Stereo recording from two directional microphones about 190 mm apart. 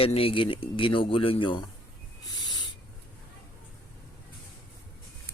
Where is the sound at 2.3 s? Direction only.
20° left (ahead or behind).